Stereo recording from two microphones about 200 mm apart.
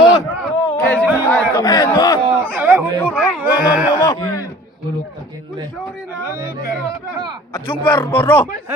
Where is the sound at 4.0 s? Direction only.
20° left (ahead or behind).